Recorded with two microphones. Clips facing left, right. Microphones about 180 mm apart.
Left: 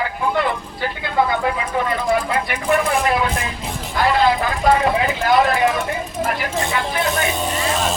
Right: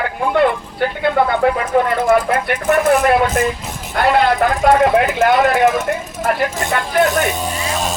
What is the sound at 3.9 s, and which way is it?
Speech, 60° right (ahead or behind).